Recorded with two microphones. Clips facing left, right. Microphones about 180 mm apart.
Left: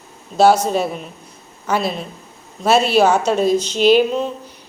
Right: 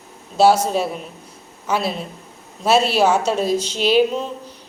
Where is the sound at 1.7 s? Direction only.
5° right (ahead or behind).